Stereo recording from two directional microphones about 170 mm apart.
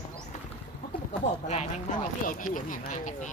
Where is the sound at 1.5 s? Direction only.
45° left (ahead or behind).